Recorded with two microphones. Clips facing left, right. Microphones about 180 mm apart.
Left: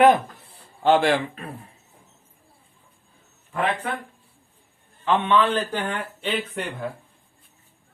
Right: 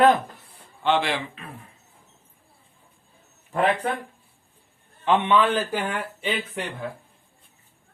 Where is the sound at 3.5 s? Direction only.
35° right (ahead or behind).